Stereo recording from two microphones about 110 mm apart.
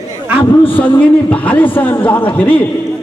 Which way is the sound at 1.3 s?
15° left (ahead or behind).